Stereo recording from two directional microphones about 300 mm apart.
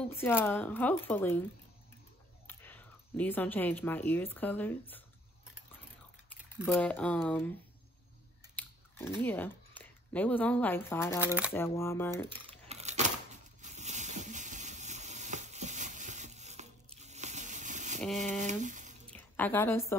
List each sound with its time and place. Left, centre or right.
0.2 s speech: centre
2.4 s speech: centre
6.6 s speech: centre
8.5 s biting: centre
9.2 s speech: centre
11.1 s speech: centre
11.5 s speech: centre
12.4 s a sound: right
18.4 s speech: right
19.1 s a woman's voice: centre